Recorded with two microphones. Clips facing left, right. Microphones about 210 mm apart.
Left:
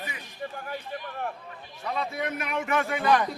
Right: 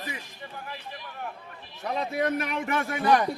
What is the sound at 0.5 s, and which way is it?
Speech, 45° left (ahead or behind).